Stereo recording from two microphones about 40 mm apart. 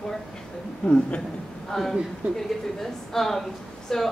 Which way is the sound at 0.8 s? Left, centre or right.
Left.